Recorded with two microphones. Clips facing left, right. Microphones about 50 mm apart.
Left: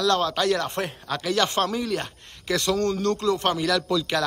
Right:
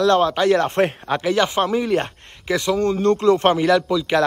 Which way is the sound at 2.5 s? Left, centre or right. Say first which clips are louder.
Right 4 dB; centre.